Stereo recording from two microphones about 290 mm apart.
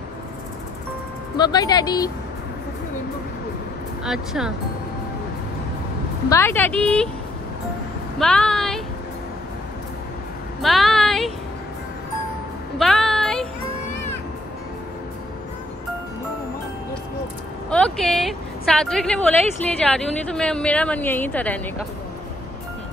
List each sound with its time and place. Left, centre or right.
1.3 s a woman's voice: centre
4.0 s a woman's voice: centre
6.2 s a woman's voice: centre
8.2 s a woman's voice: centre
10.6 s a sound: centre
12.7 s music: centre
17.6 s a woman's voice: centre